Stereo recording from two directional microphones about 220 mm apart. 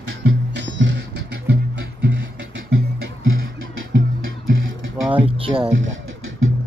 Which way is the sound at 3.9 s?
60° right (ahead or behind).